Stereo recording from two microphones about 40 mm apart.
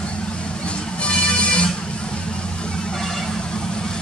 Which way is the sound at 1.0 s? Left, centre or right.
Left.